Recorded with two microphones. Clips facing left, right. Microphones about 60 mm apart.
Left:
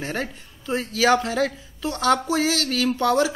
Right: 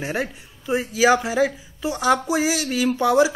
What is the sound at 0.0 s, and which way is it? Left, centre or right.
Speech, centre.